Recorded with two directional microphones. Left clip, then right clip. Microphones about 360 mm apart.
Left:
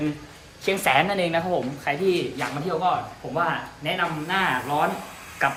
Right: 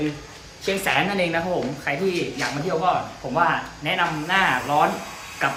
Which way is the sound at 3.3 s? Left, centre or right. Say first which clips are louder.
Right 4 dB; centre.